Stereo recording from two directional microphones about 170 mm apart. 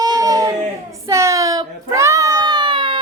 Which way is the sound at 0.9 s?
15° right (ahead or behind).